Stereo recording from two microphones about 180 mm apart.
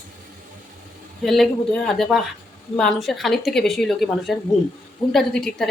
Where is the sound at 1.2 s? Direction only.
Centre (ahead or behind).